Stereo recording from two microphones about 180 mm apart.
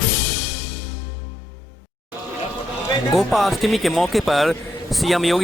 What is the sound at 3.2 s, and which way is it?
Speech, centre (ahead or behind).